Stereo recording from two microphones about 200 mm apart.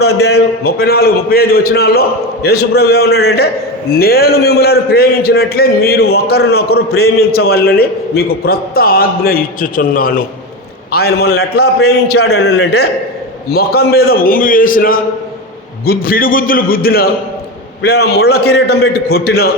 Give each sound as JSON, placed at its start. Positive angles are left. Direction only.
{"t": 0.0, "sound": "a man's voice", "side_deg": 55}